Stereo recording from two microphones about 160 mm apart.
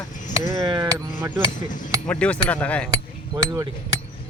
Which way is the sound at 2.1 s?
10° left (ahead or behind).